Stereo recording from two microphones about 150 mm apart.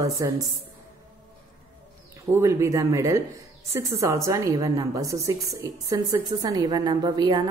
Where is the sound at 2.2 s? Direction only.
20° right (ahead or behind).